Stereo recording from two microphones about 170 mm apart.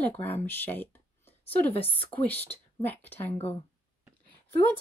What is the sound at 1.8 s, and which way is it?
Speech, 30° left (ahead or behind).